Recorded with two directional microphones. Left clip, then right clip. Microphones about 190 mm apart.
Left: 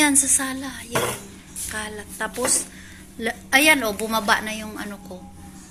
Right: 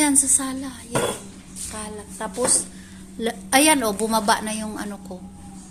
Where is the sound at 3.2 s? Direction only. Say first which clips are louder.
Left 1 dB; 20° right (ahead or behind).